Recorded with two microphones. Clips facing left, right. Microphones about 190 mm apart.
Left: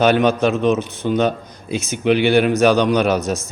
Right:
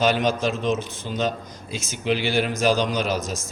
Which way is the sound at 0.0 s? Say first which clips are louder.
Left 6 dB; 60° left (ahead or behind).